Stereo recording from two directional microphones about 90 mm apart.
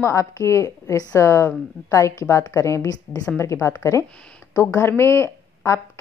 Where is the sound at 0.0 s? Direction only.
35° left (ahead or behind).